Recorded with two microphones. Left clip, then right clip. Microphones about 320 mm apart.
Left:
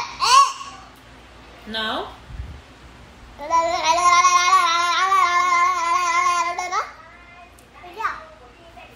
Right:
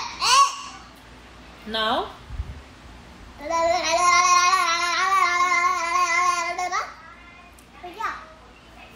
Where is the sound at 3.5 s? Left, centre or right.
Centre.